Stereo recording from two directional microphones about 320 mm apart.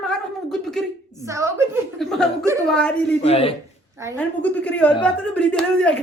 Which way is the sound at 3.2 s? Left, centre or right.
Centre.